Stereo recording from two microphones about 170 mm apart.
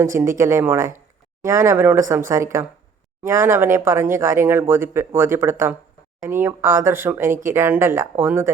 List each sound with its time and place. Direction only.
0.0 s speech: 15° right (ahead or behind)